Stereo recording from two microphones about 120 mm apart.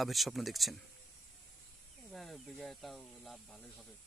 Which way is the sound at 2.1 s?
Centre (ahead or behind).